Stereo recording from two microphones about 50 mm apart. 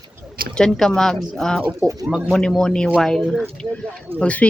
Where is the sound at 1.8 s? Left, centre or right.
Right.